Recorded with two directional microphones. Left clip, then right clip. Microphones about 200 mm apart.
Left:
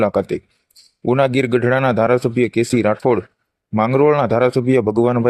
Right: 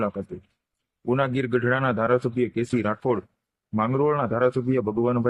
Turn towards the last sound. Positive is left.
turn(degrees=30)  # may be behind; listen again after turning